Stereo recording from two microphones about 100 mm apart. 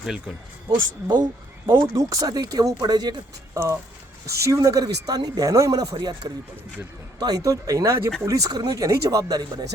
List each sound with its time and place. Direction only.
1.0 s speech: 45° right (ahead or behind)
1.8 s speech: 35° right (ahead or behind)
4.3 s speech: 30° right (ahead or behind)